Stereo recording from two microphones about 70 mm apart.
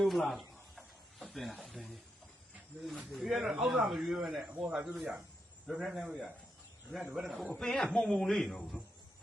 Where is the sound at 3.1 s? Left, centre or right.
Centre.